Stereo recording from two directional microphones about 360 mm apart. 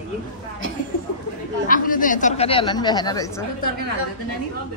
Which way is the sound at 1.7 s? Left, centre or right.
Left.